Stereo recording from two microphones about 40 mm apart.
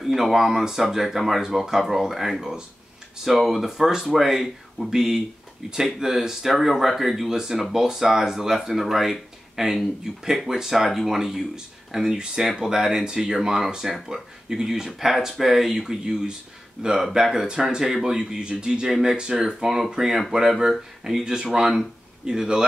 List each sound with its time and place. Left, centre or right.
0.0 s speech: centre
14.9 s speech: centre